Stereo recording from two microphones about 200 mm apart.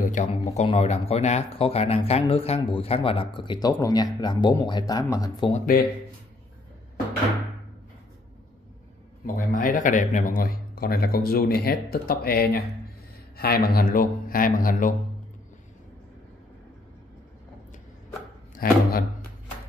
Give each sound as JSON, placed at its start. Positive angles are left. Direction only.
{"t": 0.0, "sound": "speech", "side_deg": 40}
{"t": 5.5, "sound": "a man's voice", "side_deg": 45}
{"t": 9.2, "sound": "a man's voice", "side_deg": 45}
{"t": 18.5, "sound": "speech", "side_deg": 45}